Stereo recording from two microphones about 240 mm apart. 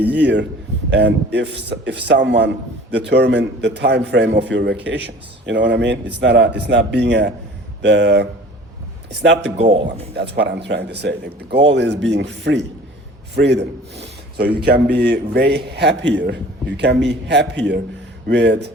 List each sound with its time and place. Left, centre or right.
0.2 s a man's voice: right
9.6 s a man's voice: right
10.2 s a man's voice: right